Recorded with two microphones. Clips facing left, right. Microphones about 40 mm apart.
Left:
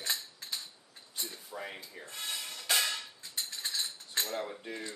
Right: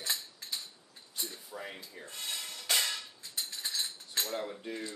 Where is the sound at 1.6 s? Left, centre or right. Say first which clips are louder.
Left 2 dB; centre.